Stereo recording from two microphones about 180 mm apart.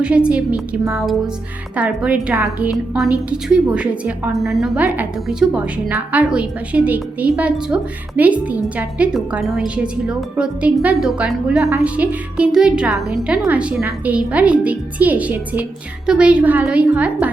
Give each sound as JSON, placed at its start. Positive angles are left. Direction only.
{"t": 0.0, "sound": "a woman's voice", "side_deg": -5}